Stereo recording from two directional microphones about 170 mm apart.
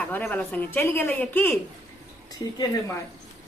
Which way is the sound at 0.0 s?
10° left (ahead or behind).